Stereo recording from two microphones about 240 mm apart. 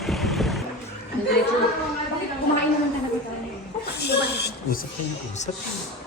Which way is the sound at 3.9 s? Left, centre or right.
Left.